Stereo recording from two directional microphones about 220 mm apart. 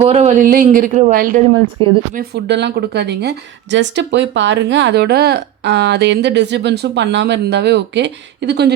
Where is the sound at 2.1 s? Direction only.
45° right (ahead or behind).